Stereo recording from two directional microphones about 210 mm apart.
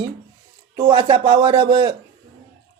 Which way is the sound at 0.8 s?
20° right (ahead or behind).